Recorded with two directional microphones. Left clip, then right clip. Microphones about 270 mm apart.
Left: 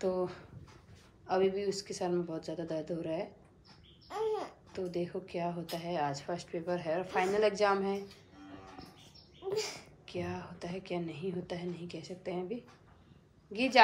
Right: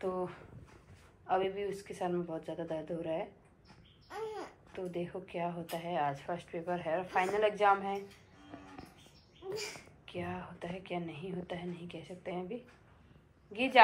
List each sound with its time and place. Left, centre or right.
0.0 s speech: centre
9.4 s babbling: left
10.1 s a woman's voice: centre